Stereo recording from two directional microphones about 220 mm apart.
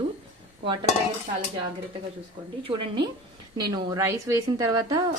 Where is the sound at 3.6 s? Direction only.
15° right (ahead or behind).